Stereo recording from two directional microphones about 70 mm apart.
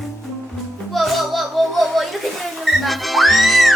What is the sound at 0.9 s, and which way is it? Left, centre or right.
Music, centre.